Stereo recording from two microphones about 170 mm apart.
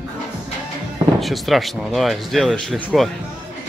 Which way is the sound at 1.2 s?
Centre (ahead or behind).